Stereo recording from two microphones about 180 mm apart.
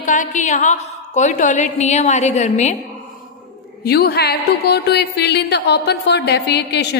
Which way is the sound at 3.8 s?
60° left (ahead or behind).